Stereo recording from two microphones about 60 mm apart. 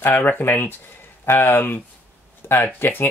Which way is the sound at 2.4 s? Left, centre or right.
Left.